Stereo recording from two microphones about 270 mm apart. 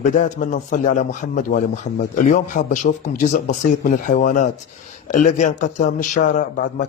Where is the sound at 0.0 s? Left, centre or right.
Left.